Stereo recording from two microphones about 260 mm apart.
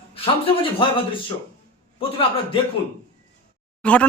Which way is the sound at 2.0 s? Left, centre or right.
Left.